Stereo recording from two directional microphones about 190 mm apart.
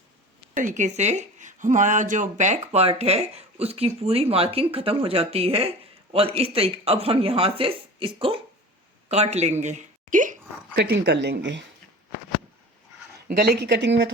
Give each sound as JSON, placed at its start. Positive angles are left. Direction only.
{"t": 0.5, "sound": "a woman's voice", "side_deg": -40}
{"t": 10.8, "sound": "speech", "side_deg": -60}
{"t": 13.2, "sound": "speech", "side_deg": -55}